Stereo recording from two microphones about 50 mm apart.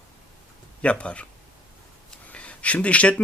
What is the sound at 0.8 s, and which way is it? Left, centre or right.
Speech, left.